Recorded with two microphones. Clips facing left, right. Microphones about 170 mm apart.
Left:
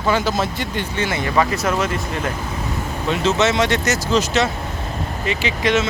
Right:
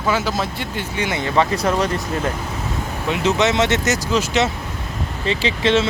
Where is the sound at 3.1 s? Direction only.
15° right (ahead or behind).